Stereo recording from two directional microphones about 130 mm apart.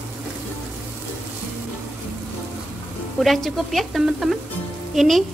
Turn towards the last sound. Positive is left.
turn(degrees=0)  # may be behind; listen again after turning